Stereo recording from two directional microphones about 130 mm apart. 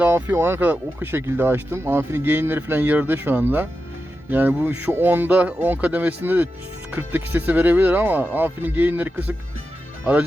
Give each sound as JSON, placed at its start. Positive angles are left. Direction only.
{"t": 0.0, "sound": "speech", "side_deg": -20}